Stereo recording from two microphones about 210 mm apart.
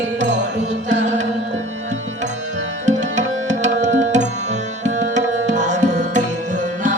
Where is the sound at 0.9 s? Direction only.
35° right (ahead or behind).